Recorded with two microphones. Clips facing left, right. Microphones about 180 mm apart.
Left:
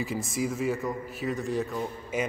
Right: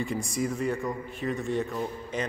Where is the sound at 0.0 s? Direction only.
Centre (ahead or behind).